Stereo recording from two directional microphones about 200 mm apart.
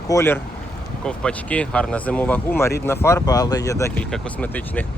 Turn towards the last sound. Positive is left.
turn(degrees=10)  # may be behind; listen again after turning